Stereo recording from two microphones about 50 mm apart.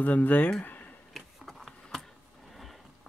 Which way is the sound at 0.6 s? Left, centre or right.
Left.